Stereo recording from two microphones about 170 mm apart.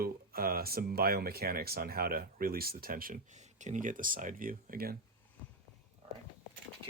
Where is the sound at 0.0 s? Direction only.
60° right (ahead or behind).